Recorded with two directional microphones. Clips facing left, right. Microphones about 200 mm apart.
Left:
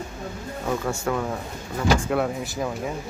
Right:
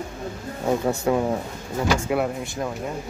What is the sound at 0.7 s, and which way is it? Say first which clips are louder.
Speech: right 5 dB; 25° right (ahead or behind).